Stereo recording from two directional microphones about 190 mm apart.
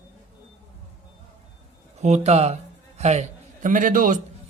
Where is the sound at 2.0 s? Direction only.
35° right (ahead or behind).